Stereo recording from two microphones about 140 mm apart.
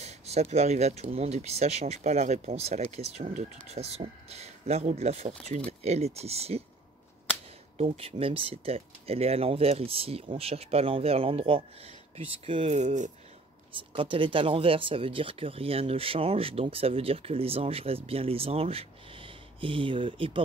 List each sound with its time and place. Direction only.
0.0 s speech: 50° right (ahead or behind)
7.7 s speech: 50° right (ahead or behind)
12.7 s speech: 60° right (ahead or behind)
13.7 s speech: 40° right (ahead or behind)